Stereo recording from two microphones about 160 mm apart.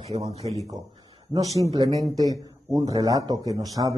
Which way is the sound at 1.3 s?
20° right (ahead or behind).